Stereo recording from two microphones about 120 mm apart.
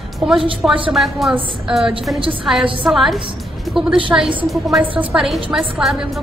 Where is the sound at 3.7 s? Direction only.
Centre (ahead or behind).